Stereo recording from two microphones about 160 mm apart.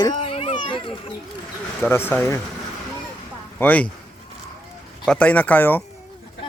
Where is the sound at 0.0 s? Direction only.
30° left (ahead or behind).